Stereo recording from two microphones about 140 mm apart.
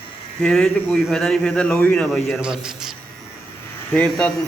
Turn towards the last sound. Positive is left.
turn(degrees=10)  # may be behind; listen again after turning